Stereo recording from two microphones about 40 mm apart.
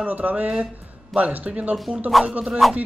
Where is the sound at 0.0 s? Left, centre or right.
Right.